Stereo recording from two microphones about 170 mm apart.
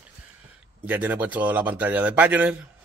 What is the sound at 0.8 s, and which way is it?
Speech, 10° right (ahead or behind).